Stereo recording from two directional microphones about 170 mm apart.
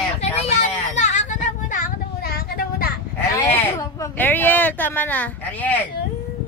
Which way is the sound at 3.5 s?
15° left (ahead or behind).